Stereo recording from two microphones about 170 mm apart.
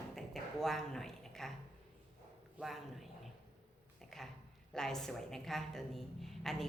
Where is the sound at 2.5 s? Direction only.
Centre (ahead or behind).